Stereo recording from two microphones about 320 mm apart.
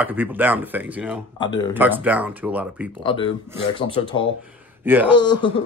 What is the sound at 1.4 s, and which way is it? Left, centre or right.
Speech, centre.